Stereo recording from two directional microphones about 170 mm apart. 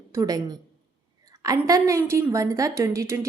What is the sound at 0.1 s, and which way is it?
A woman's voice, 20° right (ahead or behind).